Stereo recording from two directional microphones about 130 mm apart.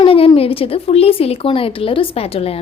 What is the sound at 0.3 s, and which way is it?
A woman's voice, 45° left (ahead or behind).